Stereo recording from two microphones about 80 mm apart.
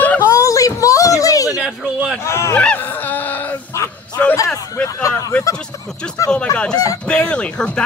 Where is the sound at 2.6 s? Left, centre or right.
Centre.